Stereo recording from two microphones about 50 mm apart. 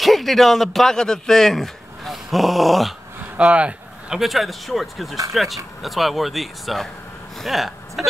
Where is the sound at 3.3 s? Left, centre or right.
Right.